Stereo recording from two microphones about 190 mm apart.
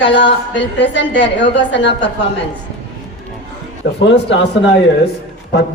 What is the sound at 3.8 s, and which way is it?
Speech, 80° left.